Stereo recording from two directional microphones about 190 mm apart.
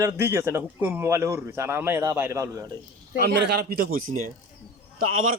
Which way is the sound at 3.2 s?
60° right (ahead or behind).